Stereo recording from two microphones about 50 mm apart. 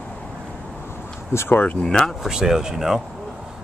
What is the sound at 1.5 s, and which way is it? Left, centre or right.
Speech, left.